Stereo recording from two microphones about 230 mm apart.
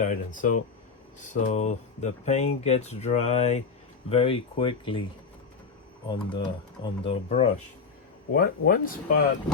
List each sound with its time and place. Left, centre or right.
0.0 s speech: left
6.1 s speech: centre
8.3 s speech: left